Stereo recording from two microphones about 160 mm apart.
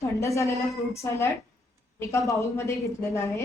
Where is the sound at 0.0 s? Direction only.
20° left (ahead or behind).